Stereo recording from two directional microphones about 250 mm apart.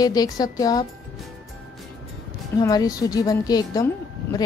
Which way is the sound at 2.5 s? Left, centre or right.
Centre.